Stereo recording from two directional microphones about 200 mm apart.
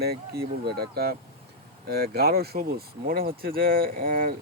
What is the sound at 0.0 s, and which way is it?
Speech, 50° right (ahead or behind).